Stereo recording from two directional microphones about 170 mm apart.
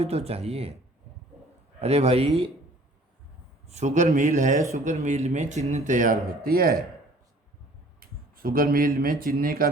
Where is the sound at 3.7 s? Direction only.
45° right (ahead or behind).